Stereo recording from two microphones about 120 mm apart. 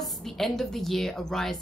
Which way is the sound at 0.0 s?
Centre (ahead or behind).